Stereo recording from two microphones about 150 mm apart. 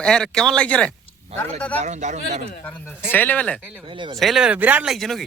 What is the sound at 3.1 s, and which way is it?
Speech, 10° left (ahead or behind).